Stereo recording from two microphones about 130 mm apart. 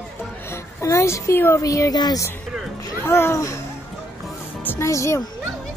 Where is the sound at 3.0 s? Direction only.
20° left (ahead or behind).